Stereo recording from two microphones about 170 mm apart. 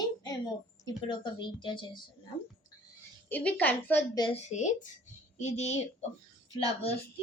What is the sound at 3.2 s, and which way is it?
Speech, 10° left (ahead or behind).